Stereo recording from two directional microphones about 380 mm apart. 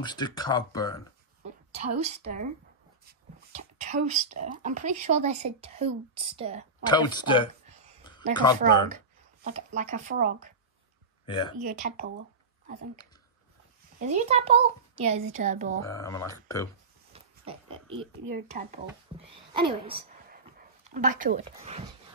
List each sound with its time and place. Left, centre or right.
0.0 s speech: centre
1.7 s a woman's voice: centre
3.1 s a sound: centre
4.4 s speech: centre
6.8 s speech: centre
8.0 s a sound: centre
8.5 s speech: centre
11.2 s speech: centre
11.6 s speech: right
13.9 s speech: centre
15.8 s speech: centre
17.1 s pig: centre
18.3 s speech: centre